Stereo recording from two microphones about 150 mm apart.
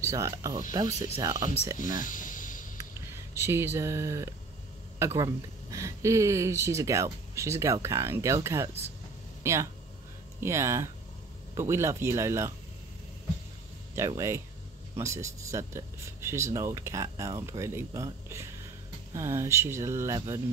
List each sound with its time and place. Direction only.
0.0 s speech: 20° right (ahead or behind)
2.0 s a sound: 60° left (ahead or behind)
2.8 s speech: 15° right (ahead or behind)
13.9 s speech: 20° right (ahead or behind)